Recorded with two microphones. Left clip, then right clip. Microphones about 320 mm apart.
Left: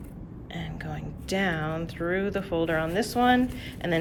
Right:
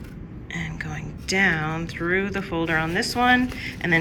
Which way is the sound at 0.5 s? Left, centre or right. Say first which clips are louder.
Right 6 dB; centre.